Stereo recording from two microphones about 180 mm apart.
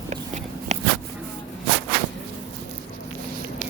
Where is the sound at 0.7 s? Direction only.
40° right (ahead or behind).